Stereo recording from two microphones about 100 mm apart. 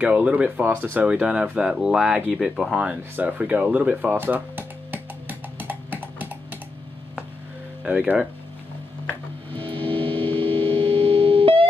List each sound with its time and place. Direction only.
0.0 s speech: 10° right (ahead or behind)
5.6 s a sound: 20° right (ahead or behind)
7.8 s speech: 15° right (ahead or behind)
9.6 s music: 60° right (ahead or behind)
10.4 s busy signal: 60° right (ahead or behind)